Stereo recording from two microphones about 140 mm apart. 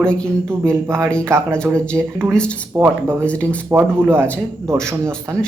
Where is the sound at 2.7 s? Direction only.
15° right (ahead or behind).